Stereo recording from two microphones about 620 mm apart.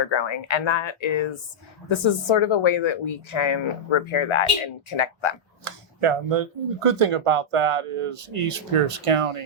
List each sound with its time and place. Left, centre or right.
0.0 s speech: left
5.6 s speech: right